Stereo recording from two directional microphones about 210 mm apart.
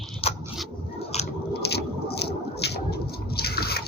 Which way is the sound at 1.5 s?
50° left (ahead or behind).